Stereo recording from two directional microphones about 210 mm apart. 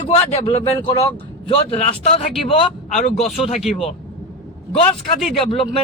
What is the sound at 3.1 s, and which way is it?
Speech, centre (ahead or behind).